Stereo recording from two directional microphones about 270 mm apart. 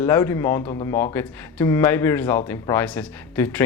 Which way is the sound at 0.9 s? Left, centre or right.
Centre.